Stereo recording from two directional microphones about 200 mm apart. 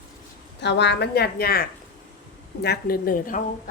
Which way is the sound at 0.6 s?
60° left (ahead or behind).